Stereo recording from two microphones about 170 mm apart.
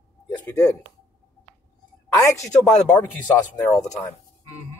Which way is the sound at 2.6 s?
5° left (ahead or behind).